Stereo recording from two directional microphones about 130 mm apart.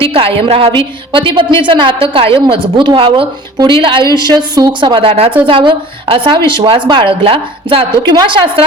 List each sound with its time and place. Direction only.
0.0 s a woman's voice: 45° right (ahead or behind)